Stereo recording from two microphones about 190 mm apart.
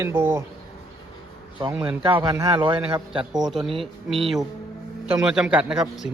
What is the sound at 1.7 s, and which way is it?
A man's voice, 10° right (ahead or behind).